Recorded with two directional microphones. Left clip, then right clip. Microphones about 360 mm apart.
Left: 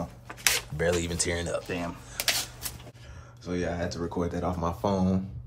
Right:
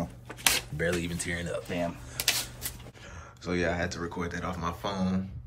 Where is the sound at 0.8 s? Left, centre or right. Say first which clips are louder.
Left 3 dB; centre.